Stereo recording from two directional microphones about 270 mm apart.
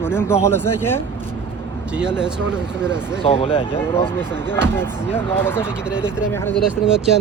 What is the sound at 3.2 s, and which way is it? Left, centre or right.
Speech, left.